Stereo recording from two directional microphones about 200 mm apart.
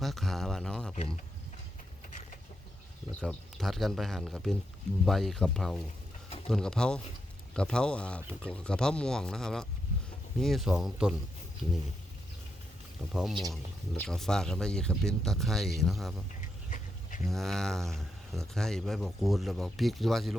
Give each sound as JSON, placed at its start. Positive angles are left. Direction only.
{"t": 0.0, "sound": "speech", "side_deg": 0}
{"t": 0.9, "sound": "speech", "side_deg": 30}
{"t": 3.2, "sound": "speech", "side_deg": 5}
{"t": 13.1, "sound": "speech", "side_deg": 0}
{"t": 16.6, "sound": "insect", "side_deg": 40}
{"t": 17.2, "sound": "speech", "side_deg": 0}